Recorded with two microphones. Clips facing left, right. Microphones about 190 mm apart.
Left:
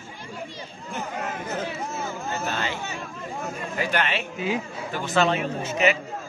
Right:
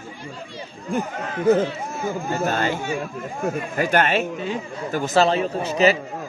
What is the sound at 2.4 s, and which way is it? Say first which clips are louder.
Speech: right 7 dB; 45° right (ahead or behind).